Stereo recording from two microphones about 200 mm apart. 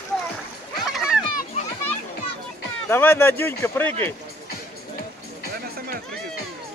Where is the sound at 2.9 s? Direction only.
10° left (ahead or behind).